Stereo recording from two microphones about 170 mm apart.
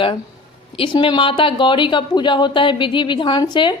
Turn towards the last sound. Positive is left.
turn(degrees=25)  # may be behind; listen again after turning